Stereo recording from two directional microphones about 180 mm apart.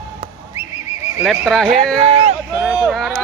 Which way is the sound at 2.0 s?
35° right (ahead or behind).